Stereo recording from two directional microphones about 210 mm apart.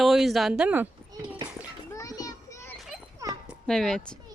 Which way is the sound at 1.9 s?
15° left (ahead or behind).